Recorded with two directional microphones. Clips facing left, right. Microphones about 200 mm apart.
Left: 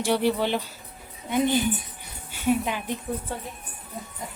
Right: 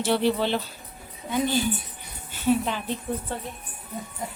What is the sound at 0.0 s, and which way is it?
A woman's voice, 10° left (ahead or behind).